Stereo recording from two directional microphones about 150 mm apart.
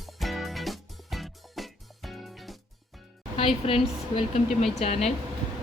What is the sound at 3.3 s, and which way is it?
Speech, 40° left (ahead or behind).